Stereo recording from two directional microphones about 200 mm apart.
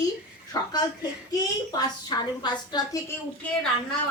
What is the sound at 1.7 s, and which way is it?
A woman's voice, 20° left (ahead or behind).